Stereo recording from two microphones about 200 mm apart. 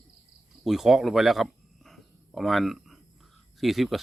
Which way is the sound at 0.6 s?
Centre (ahead or behind).